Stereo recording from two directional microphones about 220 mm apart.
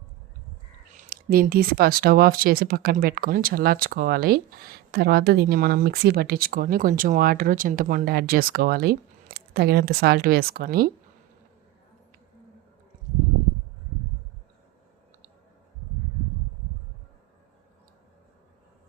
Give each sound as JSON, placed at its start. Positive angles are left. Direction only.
{"t": 0.9, "sound": "speech", "side_deg": -40}